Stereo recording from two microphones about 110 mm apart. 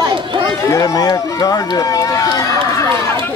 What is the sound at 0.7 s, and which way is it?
Speech, 30° left (ahead or behind).